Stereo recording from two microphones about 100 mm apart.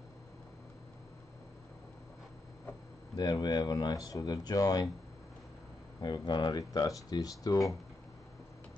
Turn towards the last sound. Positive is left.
turn(degrees=40)  # may be behind; listen again after turning